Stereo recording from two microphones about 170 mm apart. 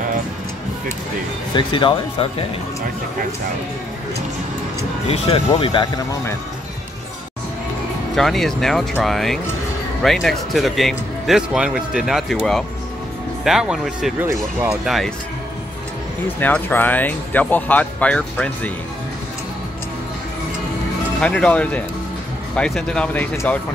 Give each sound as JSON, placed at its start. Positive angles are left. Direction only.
{"t": 1.5, "sound": "speech", "side_deg": 30}
{"t": 5.0, "sound": "speech", "side_deg": 35}
{"t": 8.2, "sound": "speech", "side_deg": 0}
{"t": 16.3, "sound": "speech", "side_deg": 10}
{"t": 21.2, "sound": "speech", "side_deg": 5}